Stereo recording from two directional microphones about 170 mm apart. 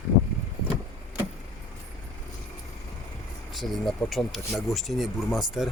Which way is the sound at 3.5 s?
Centre (ahead or behind).